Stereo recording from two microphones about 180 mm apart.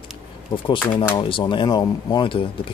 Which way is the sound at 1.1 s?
25° left (ahead or behind).